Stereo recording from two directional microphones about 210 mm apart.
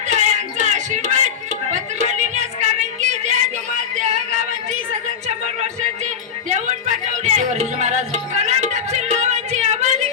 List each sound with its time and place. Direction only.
0.1 s a sound: 35° right (ahead or behind)
3.9 s music: 35° right (ahead or behind)
6.5 s music: 35° right (ahead or behind)